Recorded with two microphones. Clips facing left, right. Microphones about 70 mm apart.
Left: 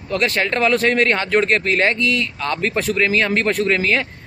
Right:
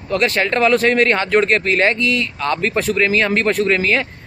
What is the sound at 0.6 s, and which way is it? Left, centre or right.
Speech, right.